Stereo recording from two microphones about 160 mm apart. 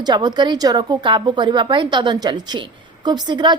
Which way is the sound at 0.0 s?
25° right (ahead or behind).